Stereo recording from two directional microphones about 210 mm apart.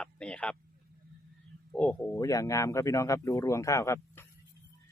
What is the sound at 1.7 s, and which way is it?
Speech, 5° left (ahead or behind).